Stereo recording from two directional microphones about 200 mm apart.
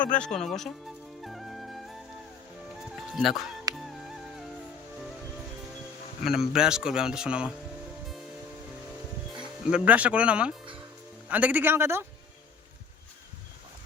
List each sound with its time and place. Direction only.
0.0 s music: 5° left (ahead or behind)
3.7 s music: 20° right (ahead or behind)
6.2 s speech: centre (ahead or behind)
9.6 s a man's voice: 5° right (ahead or behind)